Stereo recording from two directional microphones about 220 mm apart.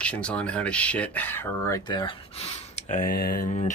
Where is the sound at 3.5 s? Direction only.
30° left (ahead or behind).